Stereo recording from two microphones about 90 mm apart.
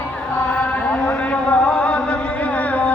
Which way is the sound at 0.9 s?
15° left (ahead or behind).